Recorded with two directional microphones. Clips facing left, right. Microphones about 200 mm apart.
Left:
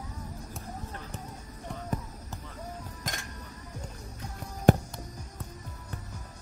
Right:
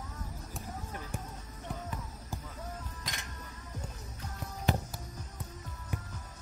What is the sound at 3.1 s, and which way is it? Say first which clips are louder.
Music: left 6 dB; 45° left (ahead or behind).